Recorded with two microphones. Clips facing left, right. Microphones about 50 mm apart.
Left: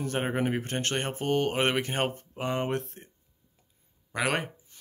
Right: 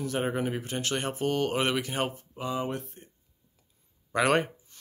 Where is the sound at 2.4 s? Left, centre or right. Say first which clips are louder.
Left 2 dB; left.